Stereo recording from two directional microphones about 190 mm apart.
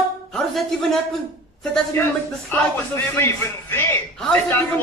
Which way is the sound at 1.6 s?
5° left (ahead or behind).